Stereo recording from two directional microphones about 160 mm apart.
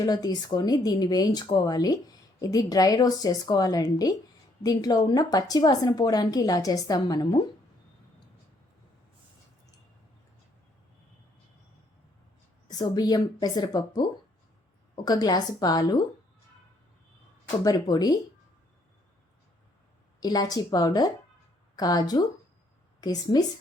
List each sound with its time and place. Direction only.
0.0 s a woman's voice: 25° left (ahead or behind)
12.6 s a woman's voice: 25° left (ahead or behind)
17.6 s a woman's voice: 25° left (ahead or behind)
20.1 s a woman's voice: 25° left (ahead or behind)